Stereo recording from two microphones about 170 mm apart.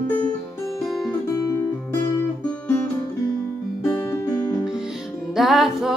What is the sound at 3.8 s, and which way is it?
Music, 20° left (ahead or behind).